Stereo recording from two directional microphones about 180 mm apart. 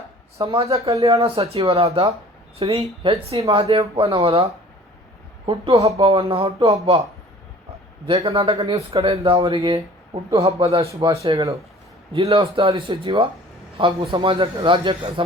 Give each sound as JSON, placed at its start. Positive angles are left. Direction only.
{"t": 0.4, "sound": "speech", "side_deg": -35}
{"t": 8.0, "sound": "a man's voice", "side_deg": -35}